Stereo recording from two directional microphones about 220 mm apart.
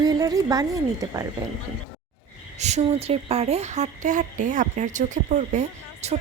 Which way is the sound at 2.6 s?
30° right (ahead or behind).